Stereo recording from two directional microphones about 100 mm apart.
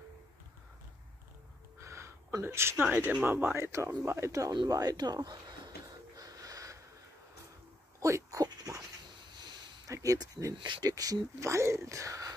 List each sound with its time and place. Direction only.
1.8 s a sound: 30° right (ahead or behind)
2.9 s speech: 15° right (ahead or behind); by 5.4 s 40° right (ahead or behind)
5.9 s wheeze: 40° right (ahead or behind)
8.0 s goat: 30° right (ahead or behind)
9.4 s a sound: 35° right (ahead or behind)
10.6 s speech: 45° right (ahead or behind)